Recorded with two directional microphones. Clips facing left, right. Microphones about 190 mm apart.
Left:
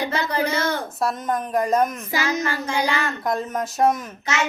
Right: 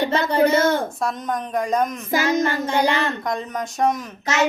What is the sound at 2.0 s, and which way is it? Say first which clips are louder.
Child singing: right 4 dB; 50° right (ahead or behind).